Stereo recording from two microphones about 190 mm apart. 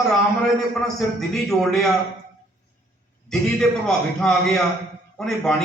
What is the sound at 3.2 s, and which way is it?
A man's voice, 5° left (ahead or behind).